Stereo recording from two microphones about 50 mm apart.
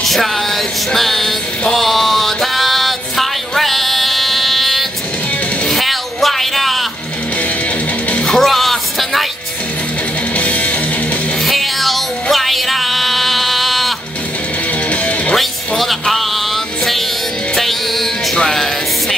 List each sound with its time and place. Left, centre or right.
0.0 s music: centre
1.8 s a sound: centre
8.2 s music: centre
10.3 s music: left
11.4 s music: centre
14.9 s music: left
15.3 s music: centre
17.6 s music: centre